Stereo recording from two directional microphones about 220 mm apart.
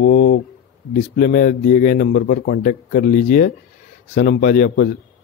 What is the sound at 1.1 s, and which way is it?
A man's voice, 40° left (ahead or behind).